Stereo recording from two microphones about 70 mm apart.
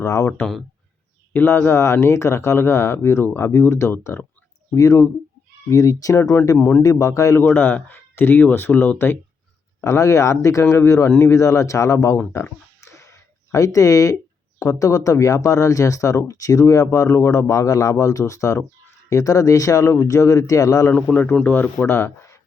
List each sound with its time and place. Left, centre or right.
0.0 s speech: left
1.3 s speech: left
6.6 s speech: left
6.8 s speech: left
7.3 s speech: left
9.8 s speech: left
12.8 s a sound: left
14.6 s speech: left
20.9 s speech: left
21.8 s speech: left